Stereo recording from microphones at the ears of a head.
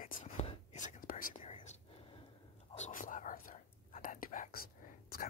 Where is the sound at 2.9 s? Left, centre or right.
Left.